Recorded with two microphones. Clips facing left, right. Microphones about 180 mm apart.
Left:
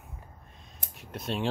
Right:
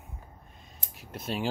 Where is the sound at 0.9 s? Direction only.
Centre (ahead or behind).